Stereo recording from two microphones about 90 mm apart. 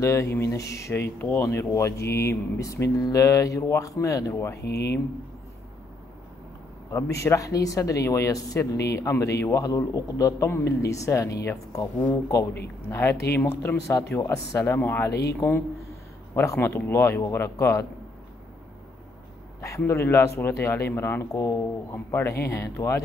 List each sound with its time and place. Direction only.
0.0 s speech: 30° left (ahead or behind)
6.9 s speech: 35° left (ahead or behind)
12.9 s speech: 30° left (ahead or behind)
19.9 s speech: 25° left (ahead or behind)